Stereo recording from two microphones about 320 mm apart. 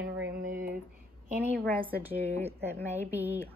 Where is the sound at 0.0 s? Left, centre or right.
Right.